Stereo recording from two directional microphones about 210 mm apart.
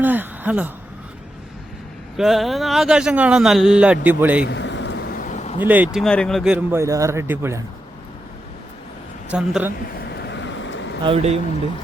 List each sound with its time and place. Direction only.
0.0 s a sound: 10° right (ahead or behind)
2.1 s a man's voice: centre (ahead or behind)
4.4 s a sound: 60° left (ahead or behind); by 5.5 s 35° left (ahead or behind)
5.6 s a man's voice: 10° right (ahead or behind)
9.3 s a man's voice: 5° right (ahead or behind)
10.1 s vehicle: 55° left (ahead or behind)
11.0 s speech: 30° right (ahead or behind)